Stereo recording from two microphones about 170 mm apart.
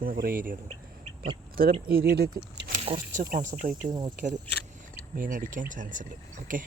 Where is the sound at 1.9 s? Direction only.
65° right (ahead or behind).